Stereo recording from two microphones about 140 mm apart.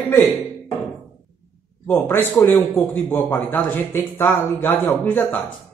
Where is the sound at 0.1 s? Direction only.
15° left (ahead or behind).